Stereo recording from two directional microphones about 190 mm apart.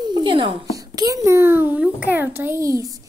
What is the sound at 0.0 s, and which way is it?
A child's voice, 25° right (ahead or behind).